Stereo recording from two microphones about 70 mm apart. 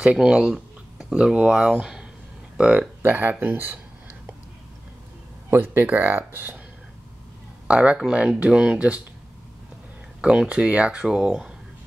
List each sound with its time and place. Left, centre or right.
0.0 s speech: centre; by 3.8 s right
5.5 s speech: right
7.6 s speech: centre
10.2 s speech: centre